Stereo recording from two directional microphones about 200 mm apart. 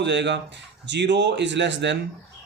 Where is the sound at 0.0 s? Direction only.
60° right (ahead or behind).